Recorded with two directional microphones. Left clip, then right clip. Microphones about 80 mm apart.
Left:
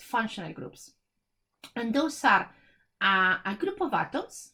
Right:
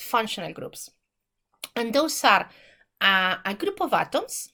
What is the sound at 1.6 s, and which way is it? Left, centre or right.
Speech, right.